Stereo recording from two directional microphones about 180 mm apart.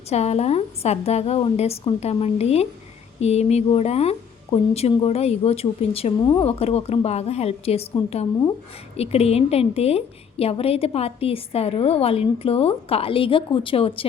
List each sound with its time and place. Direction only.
0.1 s a woman's voice: 35° left (ahead or behind)